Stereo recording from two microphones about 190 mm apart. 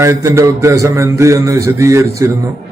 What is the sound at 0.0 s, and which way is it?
A man's voice, 15° right (ahead or behind).